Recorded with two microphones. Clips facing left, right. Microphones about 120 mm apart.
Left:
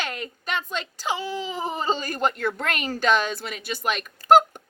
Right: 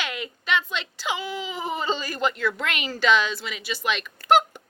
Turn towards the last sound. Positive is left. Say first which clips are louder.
# left 3 dB
turn(degrees=45)  # may be behind; listen again after turning